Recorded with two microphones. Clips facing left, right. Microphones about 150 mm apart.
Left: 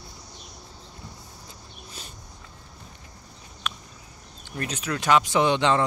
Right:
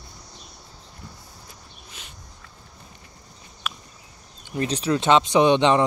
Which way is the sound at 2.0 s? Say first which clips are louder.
Left 3 dB; 35° left (ahead or behind).